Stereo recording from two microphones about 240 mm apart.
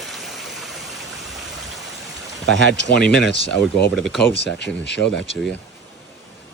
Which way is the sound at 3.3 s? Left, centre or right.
Left.